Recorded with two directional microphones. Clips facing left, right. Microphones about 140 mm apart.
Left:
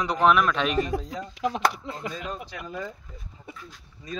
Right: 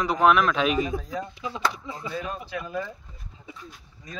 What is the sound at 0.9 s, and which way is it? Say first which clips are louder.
Speech: even; 75° left (ahead or behind).